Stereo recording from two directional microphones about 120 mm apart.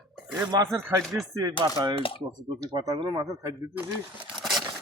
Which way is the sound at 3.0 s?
40° right (ahead or behind).